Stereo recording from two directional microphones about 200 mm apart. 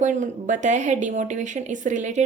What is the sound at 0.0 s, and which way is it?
Speech, 40° right (ahead or behind).